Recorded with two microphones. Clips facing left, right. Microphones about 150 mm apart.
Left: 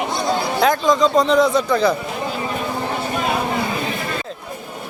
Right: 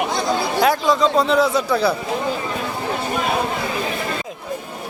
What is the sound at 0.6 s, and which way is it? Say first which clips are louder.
A man's voice: left 1 dB; 5° right (ahead or behind).